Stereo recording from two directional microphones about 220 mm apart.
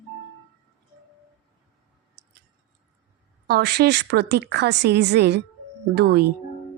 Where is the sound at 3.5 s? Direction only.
45° right (ahead or behind).